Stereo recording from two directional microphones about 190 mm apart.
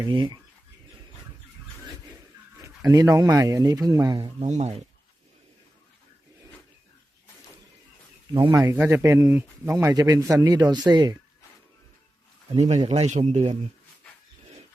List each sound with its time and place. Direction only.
0.0 s speech: 25° right (ahead or behind)
2.6 s speech: 20° right (ahead or behind)
4.4 s a man's voice: 35° right (ahead or behind)
8.3 s speech: 20° right (ahead or behind)
8.6 s a man's voice: 10° right (ahead or behind)
12.5 s a man's voice: 35° right (ahead or behind)